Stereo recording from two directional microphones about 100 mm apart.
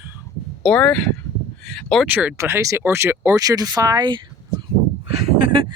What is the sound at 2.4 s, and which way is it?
Speech, 25° right (ahead or behind).